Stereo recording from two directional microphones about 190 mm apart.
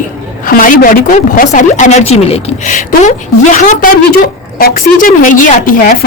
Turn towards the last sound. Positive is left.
turn(degrees=45)  # may be behind; listen again after turning